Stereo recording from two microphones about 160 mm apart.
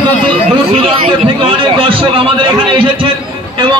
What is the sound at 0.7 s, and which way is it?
Speech, 35° right (ahead or behind).